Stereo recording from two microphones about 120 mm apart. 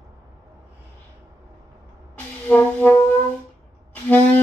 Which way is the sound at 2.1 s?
15° left (ahead or behind).